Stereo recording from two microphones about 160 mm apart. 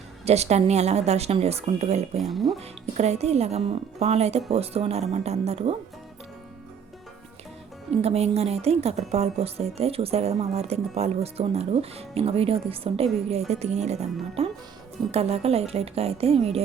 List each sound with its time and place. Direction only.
0.3 s a woman's voice: 40° right (ahead or behind)
2.3 s speech: centre (ahead or behind)
2.6 s a woman's voice: 45° right (ahead or behind)
7.9 s a woman's voice: 40° right (ahead or behind)